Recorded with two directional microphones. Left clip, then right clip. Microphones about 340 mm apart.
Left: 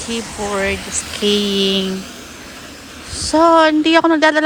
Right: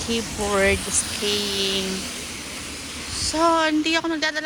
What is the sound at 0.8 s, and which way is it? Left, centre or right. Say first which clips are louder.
Speech: left 2 dB; left.